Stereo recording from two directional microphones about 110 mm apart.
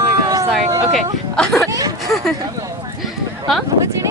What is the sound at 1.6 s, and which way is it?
Speech, 35° right (ahead or behind).